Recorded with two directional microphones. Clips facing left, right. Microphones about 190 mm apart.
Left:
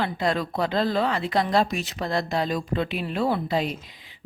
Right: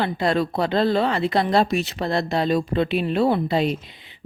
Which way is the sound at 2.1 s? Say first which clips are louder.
Right 4 dB; 25° right (ahead or behind).